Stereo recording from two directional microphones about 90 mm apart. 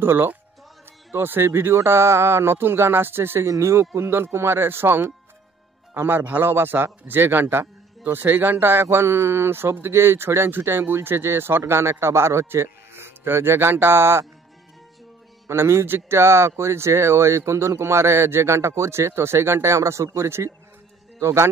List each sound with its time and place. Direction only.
0.0 s speech: 25° right (ahead or behind)
15.4 s a man's voice: 30° right (ahead or behind)